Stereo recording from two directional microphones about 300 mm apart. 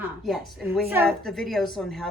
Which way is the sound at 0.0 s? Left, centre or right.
Centre.